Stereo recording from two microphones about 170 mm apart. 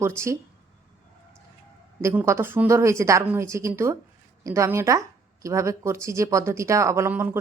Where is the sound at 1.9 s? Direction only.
15° right (ahead or behind).